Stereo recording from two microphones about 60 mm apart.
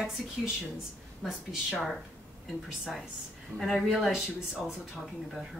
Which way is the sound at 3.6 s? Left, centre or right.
Centre.